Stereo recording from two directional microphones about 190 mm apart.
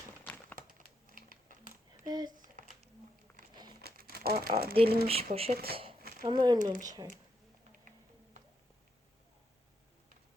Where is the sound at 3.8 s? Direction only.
55° right (ahead or behind).